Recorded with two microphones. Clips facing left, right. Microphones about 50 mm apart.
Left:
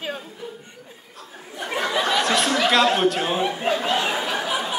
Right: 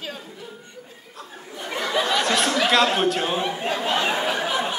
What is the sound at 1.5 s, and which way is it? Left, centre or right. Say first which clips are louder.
Speech: left 2 dB; centre.